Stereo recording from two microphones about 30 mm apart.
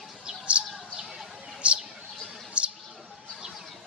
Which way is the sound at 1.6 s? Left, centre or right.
Right.